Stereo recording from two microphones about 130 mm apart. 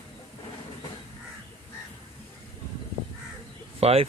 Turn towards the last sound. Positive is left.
turn(degrees=-50)  # may be behind; listen again after turning